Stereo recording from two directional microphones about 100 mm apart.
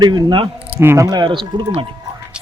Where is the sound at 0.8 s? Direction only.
25° right (ahead or behind).